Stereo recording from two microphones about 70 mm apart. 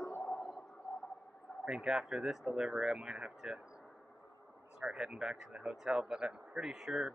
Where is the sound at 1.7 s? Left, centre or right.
Centre.